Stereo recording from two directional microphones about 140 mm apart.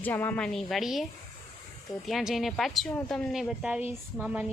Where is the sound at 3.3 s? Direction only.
5° right (ahead or behind).